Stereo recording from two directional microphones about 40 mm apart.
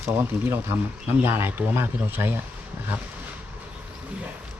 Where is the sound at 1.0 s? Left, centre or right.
Right.